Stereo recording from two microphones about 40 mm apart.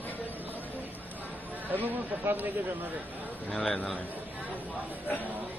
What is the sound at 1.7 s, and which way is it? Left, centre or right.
Speech, right.